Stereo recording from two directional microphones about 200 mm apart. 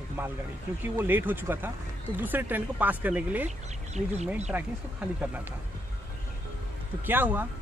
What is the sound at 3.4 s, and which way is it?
Speech, 35° right (ahead or behind).